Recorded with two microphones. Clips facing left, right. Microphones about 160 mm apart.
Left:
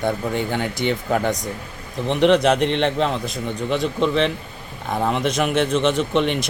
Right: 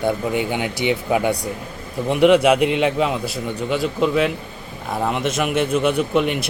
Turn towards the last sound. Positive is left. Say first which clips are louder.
# right 1 dB
turn(degrees=-5)  # may be behind; listen again after turning